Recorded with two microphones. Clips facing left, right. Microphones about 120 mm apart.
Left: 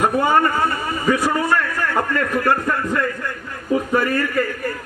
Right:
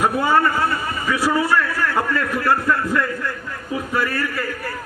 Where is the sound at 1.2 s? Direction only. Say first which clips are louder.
Right 1 dB; 10° right (ahead or behind).